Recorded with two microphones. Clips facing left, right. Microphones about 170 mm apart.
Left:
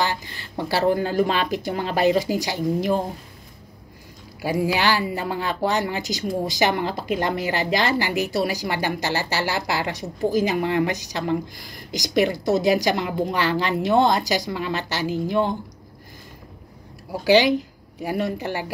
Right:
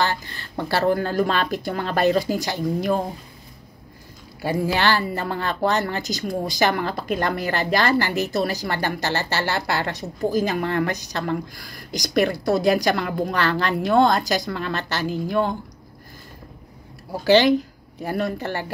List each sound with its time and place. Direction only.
0.0 s a woman's voice: 15° left (ahead or behind)
4.4 s a woman's voice: 10° left (ahead or behind)
17.1 s a woman's voice: 10° left (ahead or behind)